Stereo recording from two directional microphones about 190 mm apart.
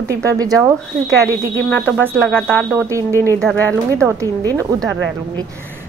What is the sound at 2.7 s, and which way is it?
Speech, 15° right (ahead or behind).